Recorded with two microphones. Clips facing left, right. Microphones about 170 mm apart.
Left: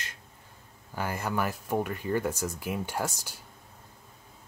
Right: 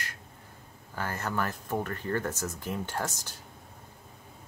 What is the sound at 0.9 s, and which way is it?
Speech, 10° left (ahead or behind).